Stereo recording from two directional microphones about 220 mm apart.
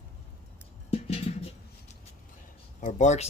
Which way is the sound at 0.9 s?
25° left (ahead or behind).